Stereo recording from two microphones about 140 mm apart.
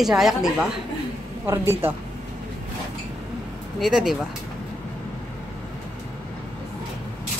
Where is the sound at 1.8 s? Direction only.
15° right (ahead or behind).